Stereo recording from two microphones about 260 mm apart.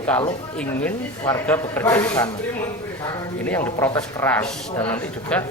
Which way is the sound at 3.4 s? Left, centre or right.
Centre.